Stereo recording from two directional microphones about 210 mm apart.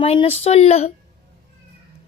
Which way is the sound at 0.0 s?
30° left (ahead or behind).